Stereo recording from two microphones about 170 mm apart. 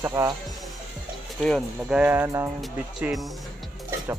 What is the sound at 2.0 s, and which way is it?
Speech, 10° right (ahead or behind).